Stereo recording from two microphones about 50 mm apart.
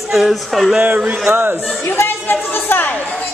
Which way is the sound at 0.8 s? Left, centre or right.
Right.